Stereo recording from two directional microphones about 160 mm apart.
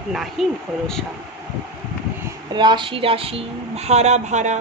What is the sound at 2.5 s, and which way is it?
A woman's voice, 30° right (ahead or behind).